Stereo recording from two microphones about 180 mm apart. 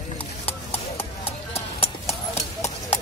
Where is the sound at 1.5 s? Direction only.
35° left (ahead or behind).